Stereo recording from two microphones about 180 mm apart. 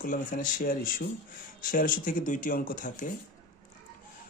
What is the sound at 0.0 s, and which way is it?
Speech, 50° left (ahead or behind).